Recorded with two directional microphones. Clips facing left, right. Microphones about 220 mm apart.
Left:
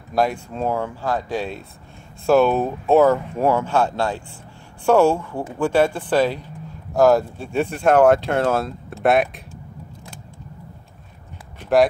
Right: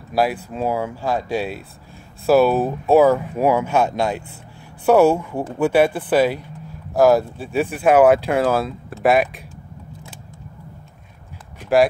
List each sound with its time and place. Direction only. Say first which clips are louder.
0.1 s speech: right 1 dB; 5° right (ahead or behind)